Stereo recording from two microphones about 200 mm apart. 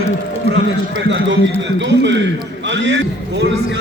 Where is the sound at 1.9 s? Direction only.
65° right (ahead or behind).